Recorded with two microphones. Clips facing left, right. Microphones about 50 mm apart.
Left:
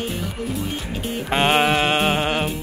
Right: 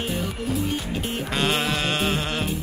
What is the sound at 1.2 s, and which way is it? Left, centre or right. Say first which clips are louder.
Music: left 7 dB; left.